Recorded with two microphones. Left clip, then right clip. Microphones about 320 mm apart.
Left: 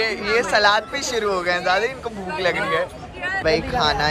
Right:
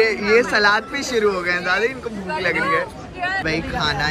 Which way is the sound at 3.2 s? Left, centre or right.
Centre.